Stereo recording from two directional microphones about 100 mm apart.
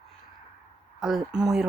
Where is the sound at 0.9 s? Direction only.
5° right (ahead or behind).